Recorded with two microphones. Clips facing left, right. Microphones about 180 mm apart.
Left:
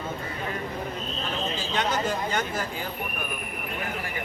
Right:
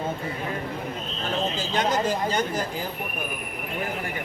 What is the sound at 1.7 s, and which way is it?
Speech, 40° right (ahead or behind).